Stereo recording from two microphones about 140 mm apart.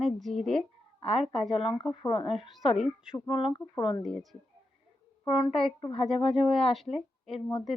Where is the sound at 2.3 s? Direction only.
Centre (ahead or behind).